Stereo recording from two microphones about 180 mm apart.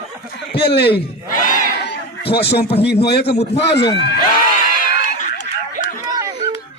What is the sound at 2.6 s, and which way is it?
Speech, 35° left (ahead or behind).